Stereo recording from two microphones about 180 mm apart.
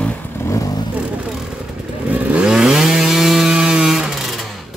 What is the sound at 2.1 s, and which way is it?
Chainsaw, 5° right (ahead or behind).